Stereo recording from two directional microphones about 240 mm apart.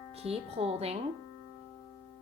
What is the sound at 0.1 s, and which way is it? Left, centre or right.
Music, right.